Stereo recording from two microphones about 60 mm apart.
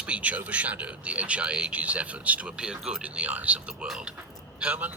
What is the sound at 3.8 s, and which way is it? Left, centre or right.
Speech, centre.